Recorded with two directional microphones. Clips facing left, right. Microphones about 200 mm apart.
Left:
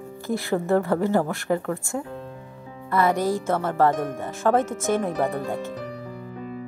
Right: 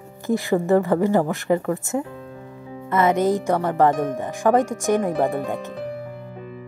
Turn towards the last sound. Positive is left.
turn(degrees=-15)  # may be behind; listen again after turning